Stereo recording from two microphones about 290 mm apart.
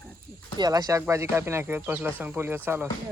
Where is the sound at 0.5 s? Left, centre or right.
Centre.